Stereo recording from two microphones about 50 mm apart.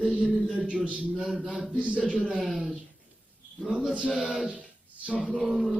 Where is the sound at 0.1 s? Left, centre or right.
Right.